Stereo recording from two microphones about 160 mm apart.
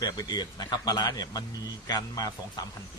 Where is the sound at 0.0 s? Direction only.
25° left (ahead or behind).